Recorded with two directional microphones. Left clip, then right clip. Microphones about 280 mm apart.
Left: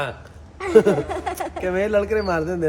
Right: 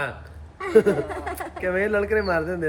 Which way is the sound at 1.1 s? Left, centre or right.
Left.